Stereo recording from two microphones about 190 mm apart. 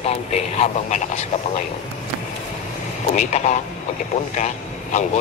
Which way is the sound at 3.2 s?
40° left (ahead or behind).